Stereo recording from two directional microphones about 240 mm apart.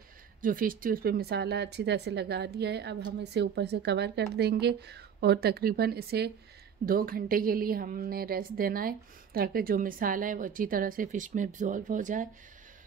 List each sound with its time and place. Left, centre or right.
0.4 s a woman's voice: right